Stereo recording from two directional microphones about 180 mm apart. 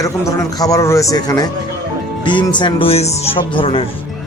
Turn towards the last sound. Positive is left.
turn(degrees=30)  # may be behind; listen again after turning